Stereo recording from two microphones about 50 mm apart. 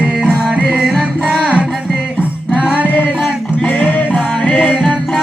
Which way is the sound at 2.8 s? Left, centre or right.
Left.